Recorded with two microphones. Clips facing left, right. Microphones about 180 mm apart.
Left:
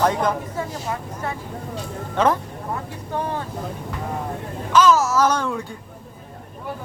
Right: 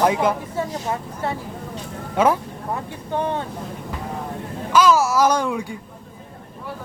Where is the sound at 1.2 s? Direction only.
25° right (ahead or behind).